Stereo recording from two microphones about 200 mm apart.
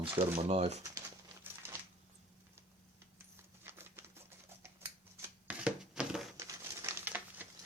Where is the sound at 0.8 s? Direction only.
15° right (ahead or behind).